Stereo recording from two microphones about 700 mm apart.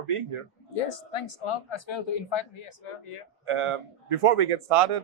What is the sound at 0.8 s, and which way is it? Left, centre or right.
Speech, left.